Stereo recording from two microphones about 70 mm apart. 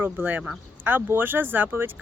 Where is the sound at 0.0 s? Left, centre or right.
Right.